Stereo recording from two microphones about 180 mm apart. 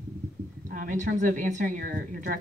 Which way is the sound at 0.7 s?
50° right (ahead or behind).